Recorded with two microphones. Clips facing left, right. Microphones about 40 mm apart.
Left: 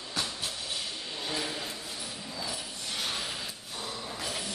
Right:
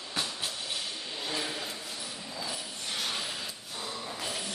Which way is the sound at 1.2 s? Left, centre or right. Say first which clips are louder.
Even; centre.